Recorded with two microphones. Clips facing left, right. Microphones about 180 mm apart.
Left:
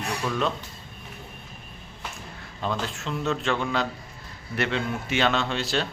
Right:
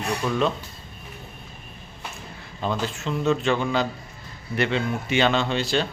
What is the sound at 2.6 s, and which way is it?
A man's voice, centre (ahead or behind).